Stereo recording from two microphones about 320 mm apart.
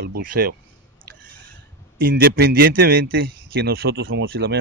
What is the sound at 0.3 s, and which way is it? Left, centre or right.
Speech, right.